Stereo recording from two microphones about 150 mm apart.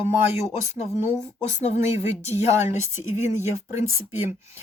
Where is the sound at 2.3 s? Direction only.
15° right (ahead or behind).